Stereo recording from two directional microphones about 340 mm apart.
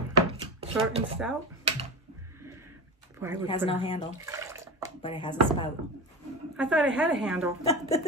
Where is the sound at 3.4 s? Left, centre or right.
Centre.